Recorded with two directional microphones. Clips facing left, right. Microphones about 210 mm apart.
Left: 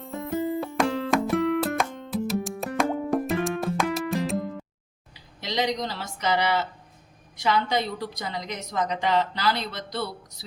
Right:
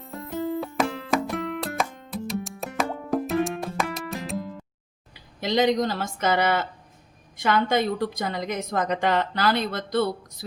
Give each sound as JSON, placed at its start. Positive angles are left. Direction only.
{"t": 0.0, "sound": "music", "side_deg": 0}
{"t": 5.1, "sound": "a woman's voice", "side_deg": -50}